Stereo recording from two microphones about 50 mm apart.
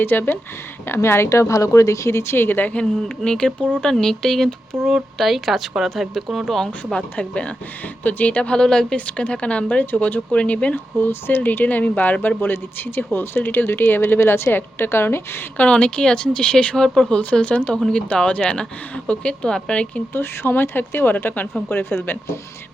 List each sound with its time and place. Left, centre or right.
0.0 s a woman's voice: left
2.4 s speech: left
3.0 s speech: centre
5.1 s a woman's voice: centre
6.7 s speech: left
9.0 s speech: left
9.9 s speech: left
10.2 s speech: left
10.9 s speech: left
12.4 s a woman's voice: left
15.5 s speech: left
17.0 s speech: left
20.1 s a woman's voice: left